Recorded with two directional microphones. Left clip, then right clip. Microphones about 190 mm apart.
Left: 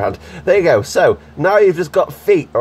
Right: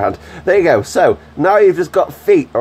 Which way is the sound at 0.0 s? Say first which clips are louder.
Right 2 dB; 10° right (ahead or behind).